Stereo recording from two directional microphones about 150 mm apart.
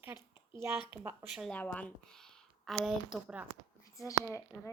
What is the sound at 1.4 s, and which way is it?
Speech, 10° left (ahead or behind).